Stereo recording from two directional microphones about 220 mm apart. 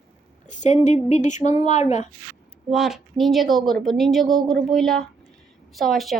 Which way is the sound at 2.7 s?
Centre (ahead or behind).